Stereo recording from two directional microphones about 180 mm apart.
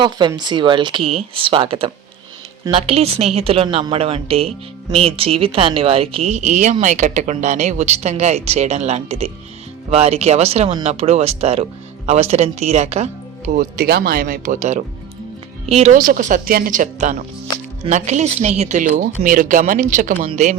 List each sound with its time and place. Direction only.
0.0 s a woman's voice: 25° right (ahead or behind)
13.6 s a woman's voice: 55° right (ahead or behind); by 20.6 s 40° right (ahead or behind)